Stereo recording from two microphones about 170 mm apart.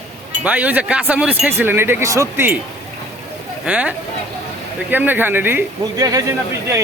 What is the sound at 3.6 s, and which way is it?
Speech, 5° right (ahead or behind).